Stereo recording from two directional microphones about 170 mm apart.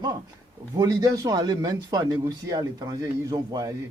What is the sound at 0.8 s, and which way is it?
A man's voice, 20° right (ahead or behind).